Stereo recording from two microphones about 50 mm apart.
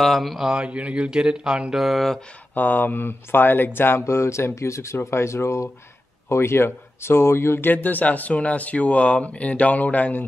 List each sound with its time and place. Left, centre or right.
0.0 s mantra: centre
0.6 s speech: right
1.7 s mantra: centre
2.5 s speech: left
4.0 s speech: left
4.6 s speech: left
4.9 s speech: left
7.7 s speech: left